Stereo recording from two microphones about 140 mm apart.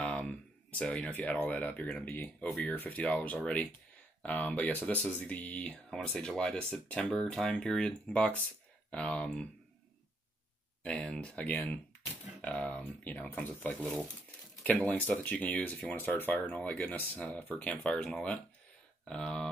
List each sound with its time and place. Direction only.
0.0 s speech: 5° left (ahead or behind)
10.8 s speech: 5° left (ahead or behind)